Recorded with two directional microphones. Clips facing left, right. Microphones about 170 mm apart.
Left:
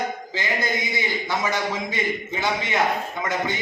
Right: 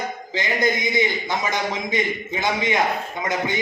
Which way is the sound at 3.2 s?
15° right (ahead or behind).